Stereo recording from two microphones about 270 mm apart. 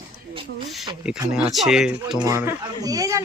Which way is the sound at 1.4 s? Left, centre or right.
Centre.